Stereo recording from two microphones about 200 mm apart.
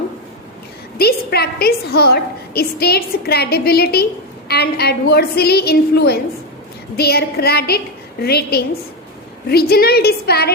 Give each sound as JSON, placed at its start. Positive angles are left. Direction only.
{"t": 0.9, "sound": "a woman's voice", "side_deg": 50}